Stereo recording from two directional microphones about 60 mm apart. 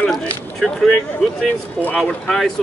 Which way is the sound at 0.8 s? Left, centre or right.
Centre.